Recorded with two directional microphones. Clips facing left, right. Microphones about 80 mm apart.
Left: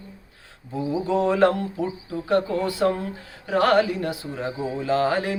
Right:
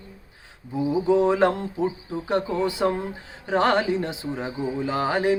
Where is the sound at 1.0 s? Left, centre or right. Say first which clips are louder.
Even; right.